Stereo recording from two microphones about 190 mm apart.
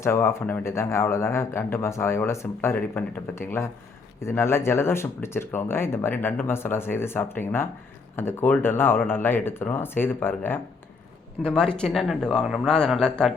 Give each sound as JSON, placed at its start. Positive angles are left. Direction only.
{"t": 0.0, "sound": "speech", "side_deg": 15}